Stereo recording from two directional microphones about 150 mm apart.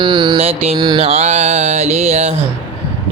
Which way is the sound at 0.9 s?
45° right (ahead or behind).